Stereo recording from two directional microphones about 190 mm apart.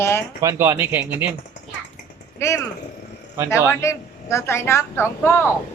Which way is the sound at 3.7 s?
15° left (ahead or behind).